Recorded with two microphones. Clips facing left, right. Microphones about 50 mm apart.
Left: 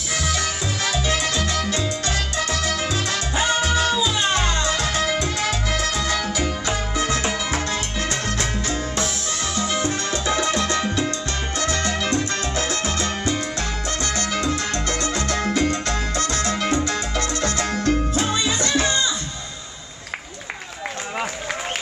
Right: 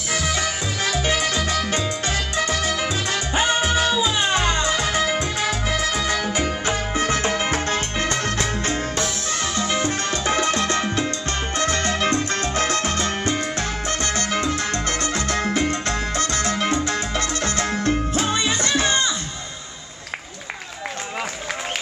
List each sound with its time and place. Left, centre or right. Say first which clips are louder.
0.1 s music: right 1 dB; right
6.3 s music: right 1 dB; right
11.5 s salsa music: right 1 dB; right
18.1 s music: even; right